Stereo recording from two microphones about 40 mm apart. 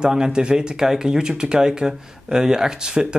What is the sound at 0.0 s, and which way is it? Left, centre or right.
Speech, centre.